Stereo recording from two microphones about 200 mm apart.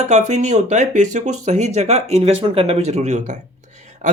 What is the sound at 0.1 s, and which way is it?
Speech, 35° right (ahead or behind).